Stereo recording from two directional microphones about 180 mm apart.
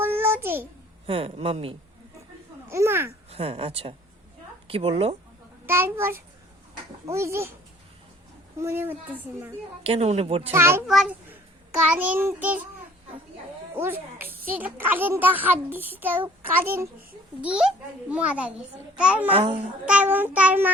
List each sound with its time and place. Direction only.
0.0 s a sound: 15° right (ahead or behind)
1.0 s speech: 30° right (ahead or behind)
2.6 s a child's voice: 15° right (ahead or behind)
3.2 s speech: 30° right (ahead or behind)
5.6 s a child's voice: 15° right (ahead or behind)
8.6 s a child's voice: 10° right (ahead or behind)
9.8 s speech: 35° right (ahead or behind)
10.5 s a child's voice: 15° right (ahead or behind)
10.8 s a child's voice: centre (ahead or behind)
13.7 s a child's voice: 10° right (ahead or behind)
19.3 s speech: 30° right (ahead or behind)
19.8 s a child's voice: 5° right (ahead or behind)